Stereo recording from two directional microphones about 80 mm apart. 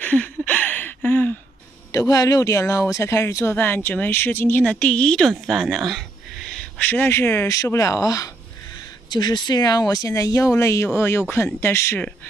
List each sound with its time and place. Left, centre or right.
0.0 s a sound: centre
1.9 s speech: left
3.5 s speech: left
4.6 s a woman's voice: centre
6.5 s speech: centre
7.4 s speech: left
9.1 s speech: left